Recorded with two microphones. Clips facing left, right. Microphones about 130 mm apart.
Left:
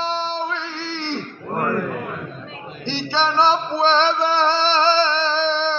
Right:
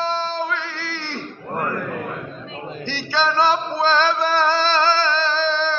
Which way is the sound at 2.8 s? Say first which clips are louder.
Left 1 dB; 25° left (ahead or behind).